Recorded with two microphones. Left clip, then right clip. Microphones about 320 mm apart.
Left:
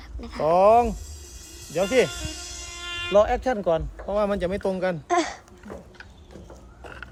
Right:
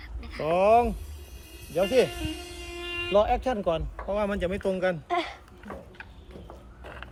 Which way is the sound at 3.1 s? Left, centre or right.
Left.